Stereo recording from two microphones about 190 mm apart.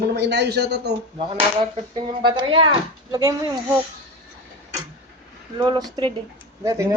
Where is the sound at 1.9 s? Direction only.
25° right (ahead or behind).